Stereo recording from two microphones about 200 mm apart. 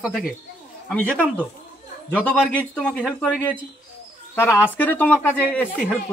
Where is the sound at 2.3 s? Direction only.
5° left (ahead or behind).